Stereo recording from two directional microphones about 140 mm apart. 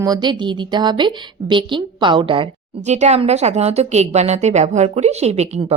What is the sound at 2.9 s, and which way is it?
A woman's voice, 55° right (ahead or behind).